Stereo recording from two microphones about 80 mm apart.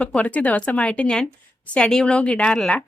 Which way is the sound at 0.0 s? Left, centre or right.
Centre.